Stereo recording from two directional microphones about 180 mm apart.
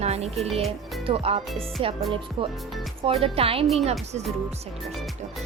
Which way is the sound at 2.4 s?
30° right (ahead or behind).